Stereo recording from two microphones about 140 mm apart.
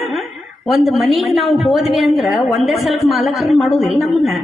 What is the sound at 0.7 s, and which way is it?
A woman's voice, centre (ahead or behind).